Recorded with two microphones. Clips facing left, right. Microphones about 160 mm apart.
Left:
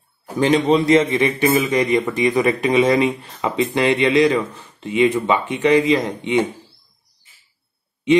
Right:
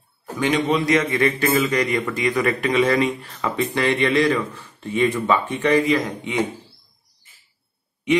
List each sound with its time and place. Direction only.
0.4 s speech: 30° left (ahead or behind)
1.1 s speech: 20° left (ahead or behind)